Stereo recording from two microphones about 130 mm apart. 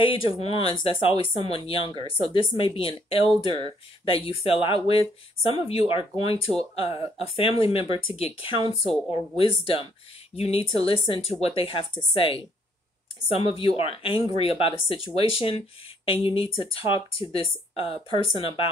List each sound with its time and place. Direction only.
0.1 s speech: 45° left (ahead or behind)